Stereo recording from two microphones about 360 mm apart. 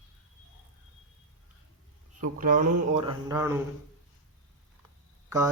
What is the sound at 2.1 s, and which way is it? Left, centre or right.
Speech, right.